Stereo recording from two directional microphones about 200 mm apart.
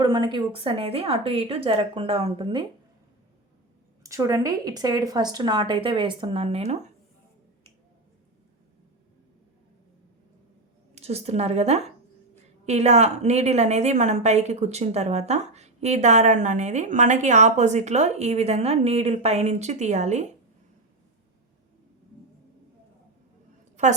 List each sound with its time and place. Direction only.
0.0 s speech: 25° right (ahead or behind)
4.0 s speech: 15° right (ahead or behind); by 6.9 s 30° right (ahead or behind)
10.9 s a woman's voice: 30° right (ahead or behind)